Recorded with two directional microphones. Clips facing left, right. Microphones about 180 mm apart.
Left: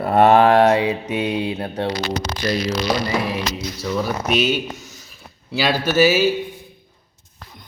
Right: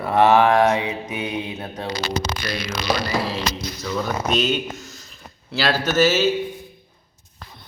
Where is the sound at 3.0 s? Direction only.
20° left (ahead or behind).